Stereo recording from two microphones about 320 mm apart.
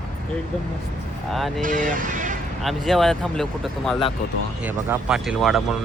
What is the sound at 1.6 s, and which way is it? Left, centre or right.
Speech, right.